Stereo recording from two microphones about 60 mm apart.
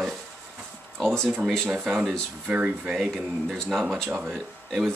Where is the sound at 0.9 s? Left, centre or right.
Centre.